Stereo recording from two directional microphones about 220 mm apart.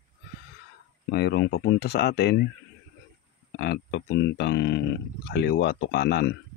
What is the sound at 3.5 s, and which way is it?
Speech, 50° left (ahead or behind).